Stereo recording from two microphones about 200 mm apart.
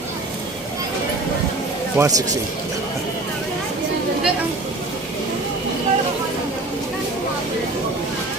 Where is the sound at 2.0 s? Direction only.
10° right (ahead or behind).